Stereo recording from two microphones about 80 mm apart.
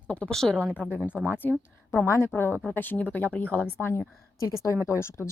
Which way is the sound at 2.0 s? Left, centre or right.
Left.